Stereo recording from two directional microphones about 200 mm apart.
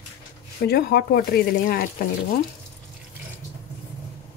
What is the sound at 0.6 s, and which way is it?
Speech, 50° left (ahead or behind).